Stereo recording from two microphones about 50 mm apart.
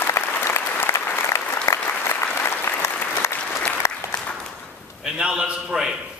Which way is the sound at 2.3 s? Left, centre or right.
Left.